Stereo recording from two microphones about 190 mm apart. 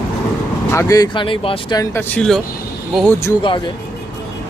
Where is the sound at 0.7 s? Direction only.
20° left (ahead or behind).